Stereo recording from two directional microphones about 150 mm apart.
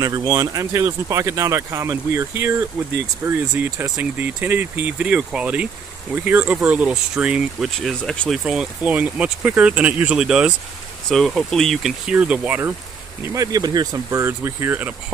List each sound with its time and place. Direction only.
0.0 s speech: 25° right (ahead or behind); by 12.7 s 10° right (ahead or behind)
13.3 s speech: 25° right (ahead or behind)